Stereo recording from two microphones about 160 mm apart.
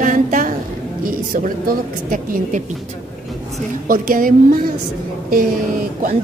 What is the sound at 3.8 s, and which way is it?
Speech, 60° right (ahead or behind).